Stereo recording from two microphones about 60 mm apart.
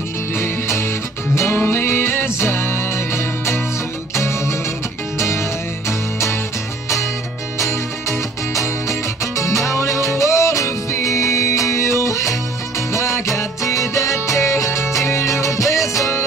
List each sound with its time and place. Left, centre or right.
0.3 s music: left
8.8 s music: left